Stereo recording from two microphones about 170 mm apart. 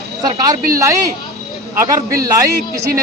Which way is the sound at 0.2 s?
20° right (ahead or behind).